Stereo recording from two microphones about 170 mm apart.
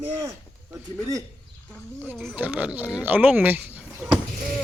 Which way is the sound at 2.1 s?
5° right (ahead or behind).